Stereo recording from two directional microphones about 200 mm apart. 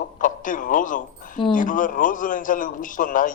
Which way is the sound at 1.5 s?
40° left (ahead or behind).